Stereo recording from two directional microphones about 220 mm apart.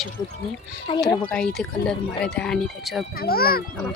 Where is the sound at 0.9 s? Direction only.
25° left (ahead or behind).